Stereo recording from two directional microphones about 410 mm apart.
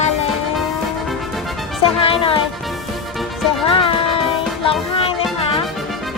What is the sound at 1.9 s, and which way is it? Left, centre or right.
Speech, centre.